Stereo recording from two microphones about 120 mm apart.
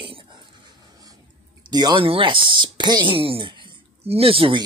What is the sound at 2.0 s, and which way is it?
Speech, 45° right (ahead or behind).